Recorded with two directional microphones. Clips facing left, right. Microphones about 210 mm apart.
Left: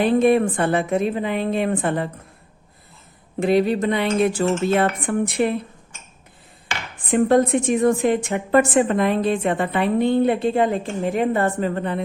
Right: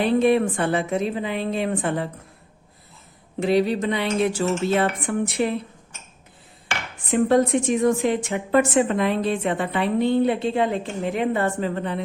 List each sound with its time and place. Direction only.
0.2 s a woman's voice: 50° left (ahead or behind)
3.4 s a woman's voice: 50° left (ahead or behind)
7.1 s a woman's voice: 50° left (ahead or behind)